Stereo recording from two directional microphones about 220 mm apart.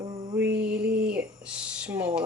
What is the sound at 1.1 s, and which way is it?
Speech, 5° right (ahead or behind).